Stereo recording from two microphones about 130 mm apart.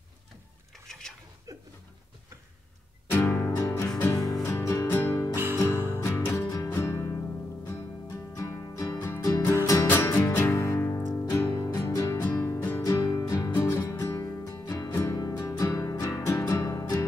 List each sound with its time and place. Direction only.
0.7 s a sound: 5° left (ahead or behind)
3.1 s music: 15° left (ahead or behind)
5.3 s music: 15° right (ahead or behind)
6.0 s music: 20° left (ahead or behind)
12.2 s music: 15° left (ahead or behind)